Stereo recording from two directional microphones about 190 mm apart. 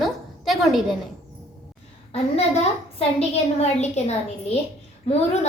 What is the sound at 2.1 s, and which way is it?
A woman's voice, 35° left (ahead or behind).